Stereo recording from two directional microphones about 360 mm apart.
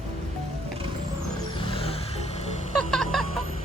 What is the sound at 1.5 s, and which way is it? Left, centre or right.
Vehicle, centre.